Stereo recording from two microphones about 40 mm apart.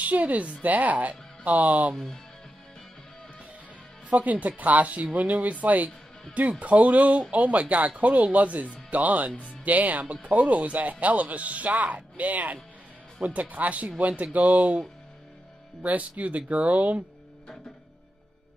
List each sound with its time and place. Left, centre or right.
0.0 s speech: right
4.2 s speech: right
15.8 s speech: right